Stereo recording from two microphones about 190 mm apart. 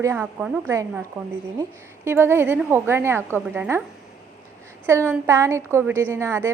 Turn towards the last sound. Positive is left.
turn(degrees=-15)  # may be behind; listen again after turning